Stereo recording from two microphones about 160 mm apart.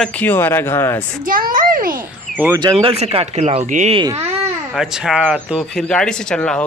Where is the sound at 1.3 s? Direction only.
60° right (ahead or behind).